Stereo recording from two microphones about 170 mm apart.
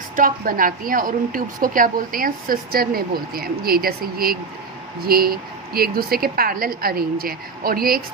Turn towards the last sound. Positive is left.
turn(degrees=-60)  # may be behind; listen again after turning